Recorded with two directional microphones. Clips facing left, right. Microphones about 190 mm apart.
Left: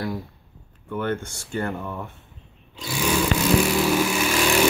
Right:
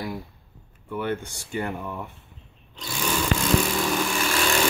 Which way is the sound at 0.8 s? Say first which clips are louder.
Left 2 dB; 10° right (ahead or behind).